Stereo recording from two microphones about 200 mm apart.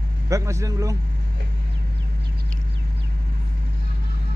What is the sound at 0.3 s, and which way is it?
Speech, 15° right (ahead or behind).